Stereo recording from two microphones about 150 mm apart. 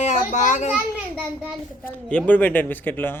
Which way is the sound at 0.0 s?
55° left (ahead or behind).